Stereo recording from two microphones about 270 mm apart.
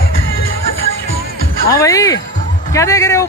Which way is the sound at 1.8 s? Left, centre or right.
Centre.